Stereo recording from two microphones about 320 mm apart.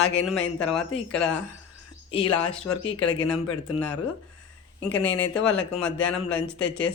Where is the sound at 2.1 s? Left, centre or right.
Centre.